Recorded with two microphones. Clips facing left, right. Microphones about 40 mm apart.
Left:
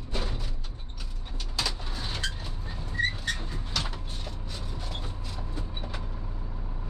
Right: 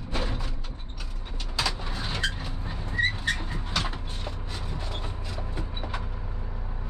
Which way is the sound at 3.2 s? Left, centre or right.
Right.